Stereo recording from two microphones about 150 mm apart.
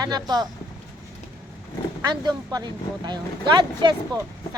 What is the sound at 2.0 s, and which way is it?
Speech, 25° right (ahead or behind).